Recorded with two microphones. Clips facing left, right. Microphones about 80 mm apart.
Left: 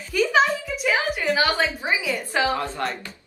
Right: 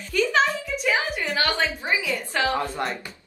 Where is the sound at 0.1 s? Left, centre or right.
Centre.